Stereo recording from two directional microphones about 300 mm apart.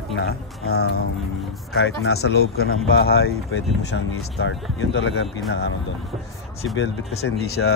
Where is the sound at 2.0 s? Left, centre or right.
Left.